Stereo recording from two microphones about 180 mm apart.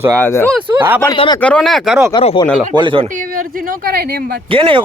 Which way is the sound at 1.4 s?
5° left (ahead or behind).